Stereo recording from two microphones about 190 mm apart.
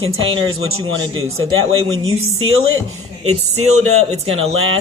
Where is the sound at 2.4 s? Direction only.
90° right.